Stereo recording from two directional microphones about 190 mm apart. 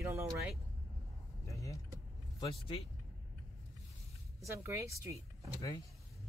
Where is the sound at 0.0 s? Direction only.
15° right (ahead or behind).